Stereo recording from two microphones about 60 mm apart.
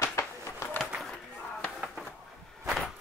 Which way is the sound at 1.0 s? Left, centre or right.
Centre.